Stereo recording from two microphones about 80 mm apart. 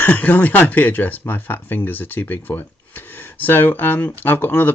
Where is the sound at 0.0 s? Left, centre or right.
Left.